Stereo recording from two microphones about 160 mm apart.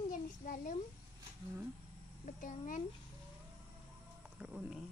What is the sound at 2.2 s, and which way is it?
Speech, 55° left (ahead or behind).